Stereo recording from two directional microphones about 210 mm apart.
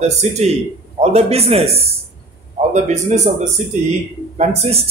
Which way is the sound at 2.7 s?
35° right (ahead or behind).